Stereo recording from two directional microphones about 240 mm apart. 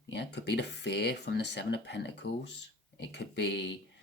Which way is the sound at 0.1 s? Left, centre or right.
Left.